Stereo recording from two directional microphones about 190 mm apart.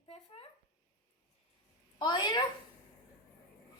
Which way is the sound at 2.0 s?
20° left (ahead or behind).